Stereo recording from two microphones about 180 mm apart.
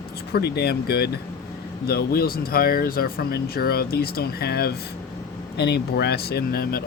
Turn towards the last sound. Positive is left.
turn(degrees=55)  # may be behind; listen again after turning